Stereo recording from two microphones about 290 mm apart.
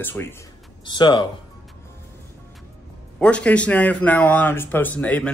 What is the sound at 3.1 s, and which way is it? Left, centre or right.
Speech, centre.